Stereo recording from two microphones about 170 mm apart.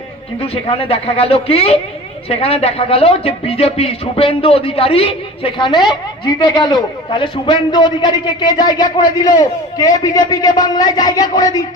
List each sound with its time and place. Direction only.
0.3 s a woman's voice: 35° left (ahead or behind)